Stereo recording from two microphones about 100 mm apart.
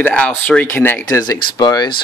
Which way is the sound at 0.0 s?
15° left (ahead or behind).